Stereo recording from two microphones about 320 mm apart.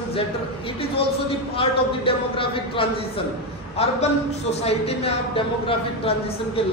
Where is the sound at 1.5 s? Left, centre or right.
Centre.